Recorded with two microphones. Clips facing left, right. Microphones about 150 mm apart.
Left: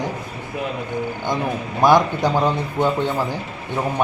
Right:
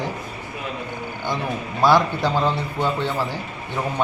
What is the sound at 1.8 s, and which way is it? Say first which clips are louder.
Speech: left 2 dB; 15° left (ahead or behind).